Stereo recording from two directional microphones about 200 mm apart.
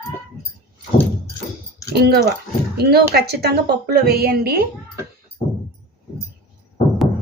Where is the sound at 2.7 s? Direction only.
50° right (ahead or behind).